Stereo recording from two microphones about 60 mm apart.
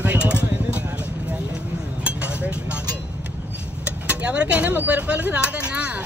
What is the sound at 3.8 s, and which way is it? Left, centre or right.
Vehicle, right.